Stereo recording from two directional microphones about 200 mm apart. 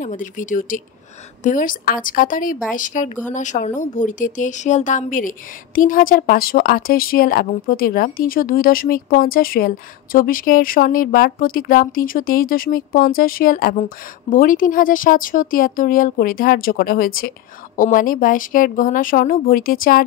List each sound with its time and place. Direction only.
0.0 s speech: 40° left (ahead or behind)